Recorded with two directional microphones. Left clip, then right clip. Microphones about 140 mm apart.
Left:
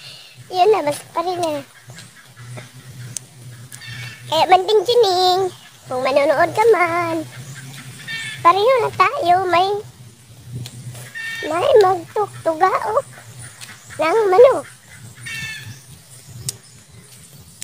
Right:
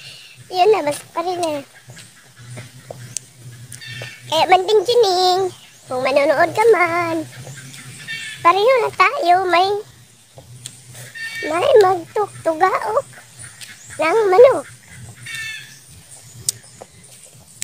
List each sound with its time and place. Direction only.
0.0 s a child's voice: 5° right (ahead or behind)
4.3 s speech: 5° right (ahead or behind)
8.4 s speech: 10° right (ahead or behind)
11.4 s speech: 10° right (ahead or behind)
13.6 s a sound: 10° right (ahead or behind)
16.5 s a sound: 25° right (ahead or behind)